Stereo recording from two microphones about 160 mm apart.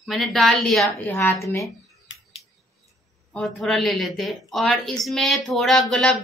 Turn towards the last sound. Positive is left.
turn(degrees=5)  # may be behind; listen again after turning